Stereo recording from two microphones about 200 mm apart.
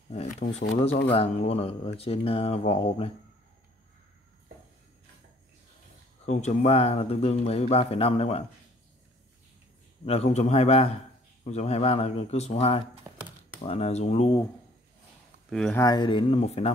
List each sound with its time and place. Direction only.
0.1 s speech: 35° left (ahead or behind)
6.2 s speech: 35° left (ahead or behind)
10.0 s speech: 30° left (ahead or behind)
13.0 s computer keyboard: 10° right (ahead or behind)
13.6 s speech: 30° left (ahead or behind)
15.5 s speech: 5° left (ahead or behind)
15.8 s speech: 20° left (ahead or behind)